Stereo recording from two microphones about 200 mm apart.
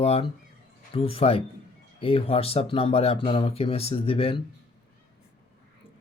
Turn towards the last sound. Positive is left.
turn(degrees=30)  # may be behind; listen again after turning